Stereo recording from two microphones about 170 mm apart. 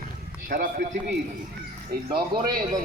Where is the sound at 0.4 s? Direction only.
55° right (ahead or behind).